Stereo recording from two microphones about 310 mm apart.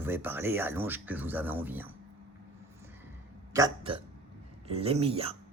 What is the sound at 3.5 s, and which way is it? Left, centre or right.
Speech, centre.